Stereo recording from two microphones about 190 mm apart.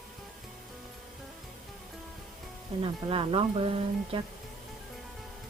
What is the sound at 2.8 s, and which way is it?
Speech, 30° right (ahead or behind).